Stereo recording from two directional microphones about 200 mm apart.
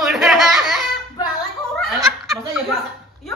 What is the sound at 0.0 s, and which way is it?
Laughter, centre (ahead or behind).